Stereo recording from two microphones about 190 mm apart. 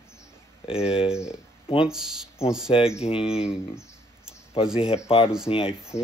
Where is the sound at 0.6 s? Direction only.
30° left (ahead or behind).